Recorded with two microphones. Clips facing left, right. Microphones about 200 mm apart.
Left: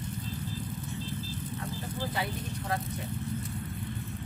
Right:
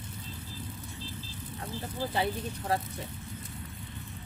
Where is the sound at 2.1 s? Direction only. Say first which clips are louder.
Right 3 dB; 30° right (ahead or behind).